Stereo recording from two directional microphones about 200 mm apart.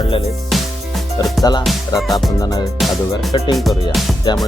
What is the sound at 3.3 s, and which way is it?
Speech, 25° left (ahead or behind).